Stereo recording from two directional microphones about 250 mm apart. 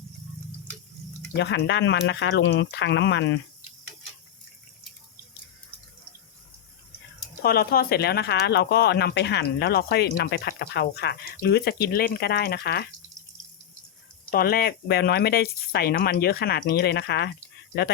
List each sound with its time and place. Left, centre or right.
1.4 s speech: left
7.4 s speech: left
14.3 s speech: left